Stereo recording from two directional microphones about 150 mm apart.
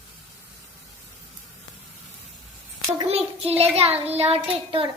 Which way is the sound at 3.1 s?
40° right (ahead or behind).